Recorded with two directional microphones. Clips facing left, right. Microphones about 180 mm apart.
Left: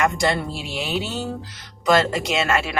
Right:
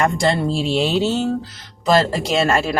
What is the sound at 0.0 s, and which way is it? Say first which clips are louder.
Speech: right 3 dB; 30° right (ahead or behind).